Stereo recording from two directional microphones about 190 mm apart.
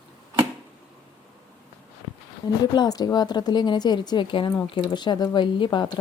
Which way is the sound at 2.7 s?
20° left (ahead or behind).